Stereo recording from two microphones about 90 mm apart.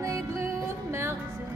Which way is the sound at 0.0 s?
35° right (ahead or behind).